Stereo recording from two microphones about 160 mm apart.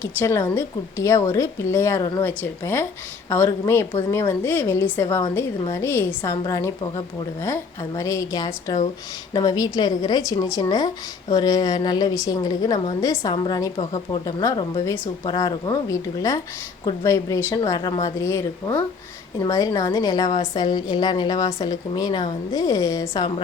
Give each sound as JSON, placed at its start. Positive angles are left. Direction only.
{"t": 0.0, "sound": "a woman's voice", "side_deg": 15}